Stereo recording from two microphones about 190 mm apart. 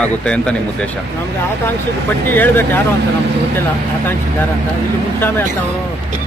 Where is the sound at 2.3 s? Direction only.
10° left (ahead or behind).